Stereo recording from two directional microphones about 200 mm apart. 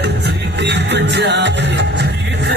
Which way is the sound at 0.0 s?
60° right (ahead or behind).